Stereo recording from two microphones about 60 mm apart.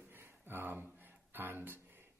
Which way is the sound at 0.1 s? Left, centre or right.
Right.